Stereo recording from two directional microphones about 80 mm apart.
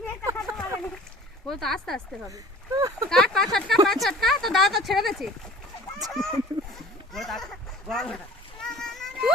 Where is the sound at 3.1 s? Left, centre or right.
Centre.